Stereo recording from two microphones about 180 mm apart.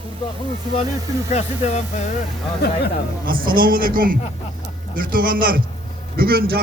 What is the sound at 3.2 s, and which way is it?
A man's voice, 50° right (ahead or behind).